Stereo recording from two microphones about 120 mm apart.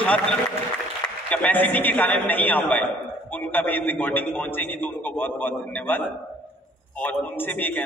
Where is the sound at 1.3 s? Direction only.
10° left (ahead or behind).